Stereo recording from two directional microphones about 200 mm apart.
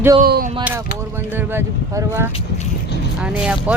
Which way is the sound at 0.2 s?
50° right (ahead or behind).